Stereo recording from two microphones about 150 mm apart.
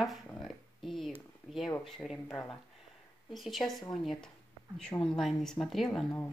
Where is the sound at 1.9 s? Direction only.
Centre (ahead or behind).